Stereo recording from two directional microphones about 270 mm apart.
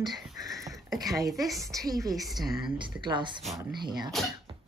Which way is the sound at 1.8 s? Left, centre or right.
Centre.